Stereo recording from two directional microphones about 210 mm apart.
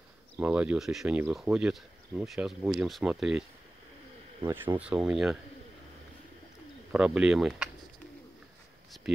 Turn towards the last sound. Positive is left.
turn(degrees=0)  # may be behind; listen again after turning